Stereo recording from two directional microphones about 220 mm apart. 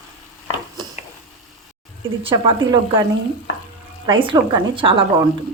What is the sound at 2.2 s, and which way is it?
Speech, 20° right (ahead or behind).